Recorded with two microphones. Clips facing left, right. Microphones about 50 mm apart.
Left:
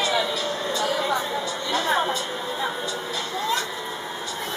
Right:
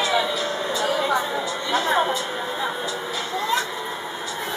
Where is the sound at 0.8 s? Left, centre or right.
Centre.